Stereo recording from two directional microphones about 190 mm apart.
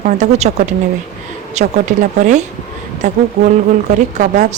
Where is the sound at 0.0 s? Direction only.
35° right (ahead or behind).